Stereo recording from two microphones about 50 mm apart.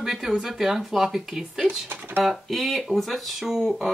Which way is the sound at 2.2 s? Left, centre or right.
Centre.